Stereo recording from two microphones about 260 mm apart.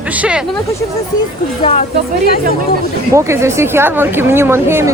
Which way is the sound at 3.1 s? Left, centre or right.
Centre.